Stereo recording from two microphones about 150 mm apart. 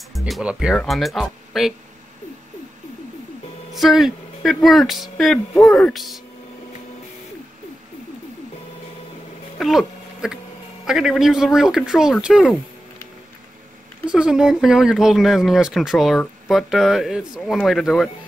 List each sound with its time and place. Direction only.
0.1 s speech: 5° right (ahead or behind)
3.7 s speech: centre (ahead or behind)
9.6 s a sound: centre (ahead or behind)
10.9 s speech: 5° right (ahead or behind)
14.1 s speech: 5° right (ahead or behind)